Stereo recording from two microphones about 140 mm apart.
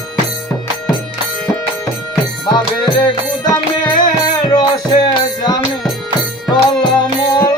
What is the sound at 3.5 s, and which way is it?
Music, 30° left (ahead or behind).